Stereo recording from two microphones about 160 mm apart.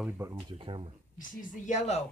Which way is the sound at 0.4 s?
30° right (ahead or behind).